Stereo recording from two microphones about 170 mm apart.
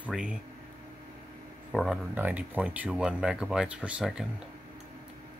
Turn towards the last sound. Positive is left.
turn(degrees=-5)  # may be behind; listen again after turning